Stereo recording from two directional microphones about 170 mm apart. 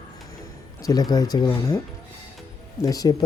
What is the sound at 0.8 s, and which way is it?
Speech, 20° left (ahead or behind).